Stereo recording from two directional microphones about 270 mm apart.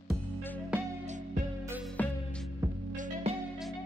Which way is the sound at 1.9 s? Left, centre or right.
Centre.